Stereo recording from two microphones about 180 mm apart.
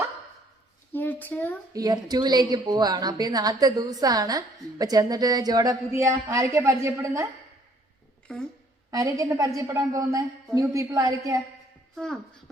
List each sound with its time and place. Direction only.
0.9 s a sound: 10° left (ahead or behind)
1.7 s a woman's voice: 20° right (ahead or behind)
8.3 s speech: 5° left (ahead or behind)
8.9 s a woman's voice: 20° right (ahead or behind)
11.9 s speech: 5° left (ahead or behind)